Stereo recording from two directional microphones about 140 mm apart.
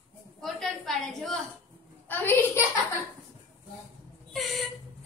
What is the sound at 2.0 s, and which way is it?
Speech, 15° left (ahead or behind).